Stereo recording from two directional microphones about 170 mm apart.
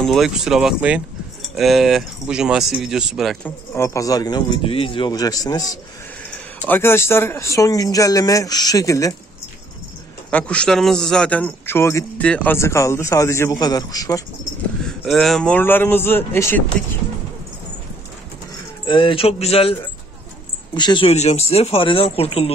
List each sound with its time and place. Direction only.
0.0 s speech: centre (ahead or behind)
3.4 s speech: 15° left (ahead or behind)
10.3 s a man's voice: 5° left (ahead or behind)
14.9 s a man's voice: centre (ahead or behind)
18.9 s speech: 30° left (ahead or behind)